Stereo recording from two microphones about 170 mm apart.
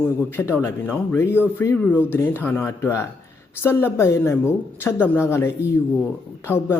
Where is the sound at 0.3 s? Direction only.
15° left (ahead or behind).